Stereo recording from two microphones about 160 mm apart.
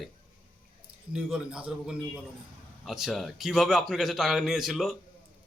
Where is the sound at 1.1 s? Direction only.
5° right (ahead or behind).